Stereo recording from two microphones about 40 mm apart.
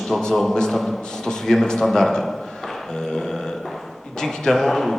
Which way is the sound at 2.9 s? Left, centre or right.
Centre.